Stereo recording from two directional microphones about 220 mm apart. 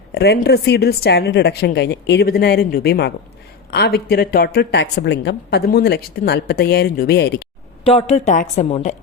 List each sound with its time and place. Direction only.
0.1 s speech: 45° left (ahead or behind)
7.9 s a woman's voice: 30° left (ahead or behind)